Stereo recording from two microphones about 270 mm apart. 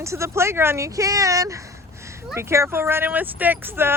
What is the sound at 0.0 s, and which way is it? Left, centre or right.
Speech, centre.